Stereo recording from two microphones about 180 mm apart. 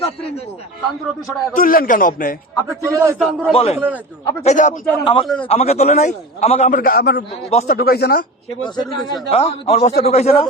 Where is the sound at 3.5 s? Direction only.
30° left (ahead or behind).